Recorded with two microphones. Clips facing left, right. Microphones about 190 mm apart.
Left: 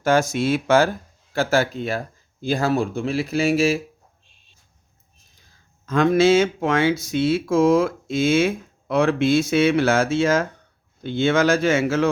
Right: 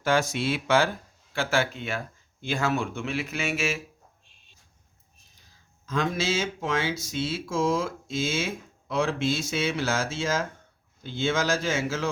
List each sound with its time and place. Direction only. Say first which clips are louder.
0.0 s speech: left 6 dB; 45° left (ahead or behind)
5.8 s speech: left 11 dB; 60° left (ahead or behind)